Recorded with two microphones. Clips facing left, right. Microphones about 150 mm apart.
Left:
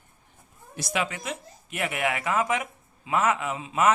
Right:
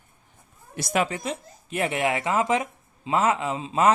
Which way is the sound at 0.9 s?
40° right (ahead or behind).